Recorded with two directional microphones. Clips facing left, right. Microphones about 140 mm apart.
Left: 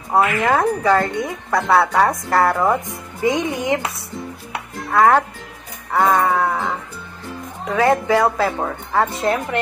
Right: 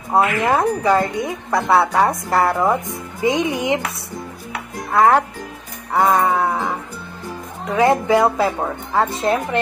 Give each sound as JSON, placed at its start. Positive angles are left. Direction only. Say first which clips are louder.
{"t": 0.1, "sound": "a woman's voice", "louder": "even", "side_deg": -15}
{"t": 4.9, "sound": "a woman's voice", "louder": "even", "side_deg": -25}
{"t": 7.7, "sound": "a woman's voice", "louder": "right 1 dB", "side_deg": -20}